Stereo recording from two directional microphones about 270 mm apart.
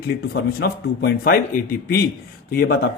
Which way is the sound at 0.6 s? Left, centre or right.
Left.